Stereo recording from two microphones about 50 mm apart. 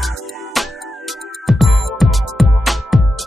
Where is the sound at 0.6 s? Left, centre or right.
Centre.